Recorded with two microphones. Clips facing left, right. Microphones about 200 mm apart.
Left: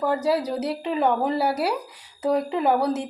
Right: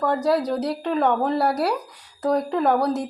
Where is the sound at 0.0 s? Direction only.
5° left (ahead or behind).